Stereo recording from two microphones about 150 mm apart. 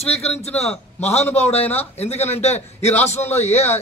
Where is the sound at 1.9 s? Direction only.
45° left (ahead or behind).